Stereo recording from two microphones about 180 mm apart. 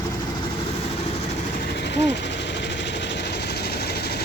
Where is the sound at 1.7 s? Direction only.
70° left (ahead or behind).